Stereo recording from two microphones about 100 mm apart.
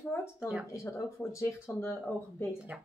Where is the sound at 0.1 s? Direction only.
25° left (ahead or behind).